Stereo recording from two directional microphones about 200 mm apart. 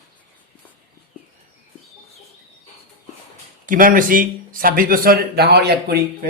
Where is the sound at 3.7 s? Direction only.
45° right (ahead or behind).